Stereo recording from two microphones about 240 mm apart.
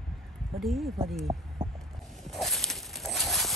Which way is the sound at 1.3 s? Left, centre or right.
Centre.